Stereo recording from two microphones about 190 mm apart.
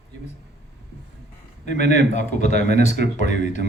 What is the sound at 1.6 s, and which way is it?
A man's voice, 40° left (ahead or behind).